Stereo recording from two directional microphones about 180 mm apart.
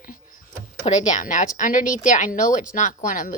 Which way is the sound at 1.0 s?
45° left (ahead or behind).